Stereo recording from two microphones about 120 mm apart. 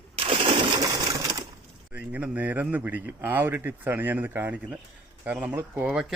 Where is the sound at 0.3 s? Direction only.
45° right (ahead or behind); by 1.5 s 25° right (ahead or behind).